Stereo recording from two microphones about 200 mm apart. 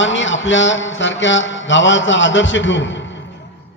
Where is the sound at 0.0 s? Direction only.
65° left (ahead or behind).